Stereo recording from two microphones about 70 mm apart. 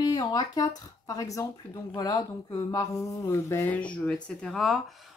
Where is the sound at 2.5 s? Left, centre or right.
Left.